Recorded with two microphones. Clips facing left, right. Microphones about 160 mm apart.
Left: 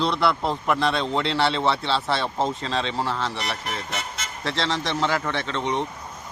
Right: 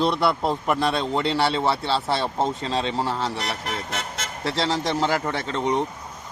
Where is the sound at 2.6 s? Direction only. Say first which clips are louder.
Right 1 dB; 40° right (ahead or behind).